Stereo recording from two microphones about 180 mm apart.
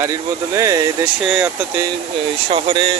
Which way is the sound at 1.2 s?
5° right (ahead or behind).